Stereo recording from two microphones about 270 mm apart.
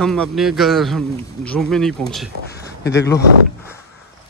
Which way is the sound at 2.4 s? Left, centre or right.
Left.